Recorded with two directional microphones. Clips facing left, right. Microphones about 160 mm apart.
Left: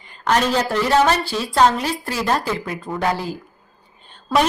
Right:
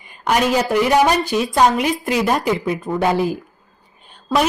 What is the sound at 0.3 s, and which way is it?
A woman's voice, 10° right (ahead or behind).